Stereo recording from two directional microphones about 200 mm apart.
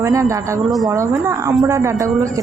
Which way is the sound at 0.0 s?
15° right (ahead or behind).